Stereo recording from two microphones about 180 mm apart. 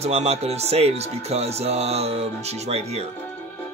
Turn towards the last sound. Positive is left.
turn(degrees=-35)  # may be behind; listen again after turning